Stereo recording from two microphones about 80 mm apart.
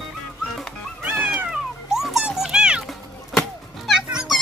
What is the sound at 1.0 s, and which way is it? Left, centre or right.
Cat, right.